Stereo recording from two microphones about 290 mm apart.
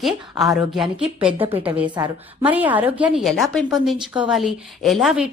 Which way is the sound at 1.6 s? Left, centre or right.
Centre.